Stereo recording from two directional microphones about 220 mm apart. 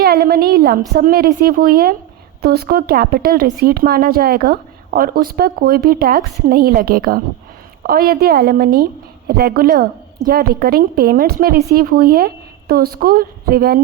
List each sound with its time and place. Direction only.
0.0 s a woman's voice: 45° right (ahead or behind)